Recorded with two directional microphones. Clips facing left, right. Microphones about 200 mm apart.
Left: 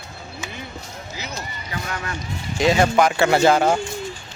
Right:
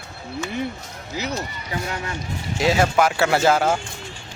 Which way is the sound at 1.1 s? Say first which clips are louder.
Right 8 dB; 65° right (ahead or behind).